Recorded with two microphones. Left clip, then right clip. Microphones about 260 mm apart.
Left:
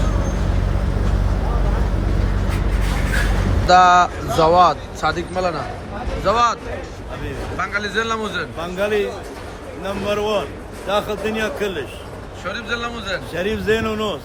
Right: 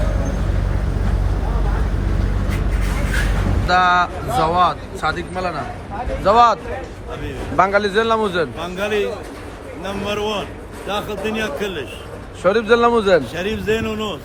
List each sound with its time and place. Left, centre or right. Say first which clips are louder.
3.7 s a man's voice: left 3 dB; centre
12.4 s a man's voice: right 11 dB; centre
13.3 s a man's voice: left 1 dB; centre